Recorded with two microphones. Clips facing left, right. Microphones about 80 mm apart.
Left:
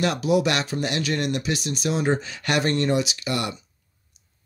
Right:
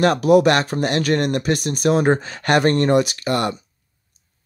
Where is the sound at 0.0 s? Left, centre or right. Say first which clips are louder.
Right 7 dB; right.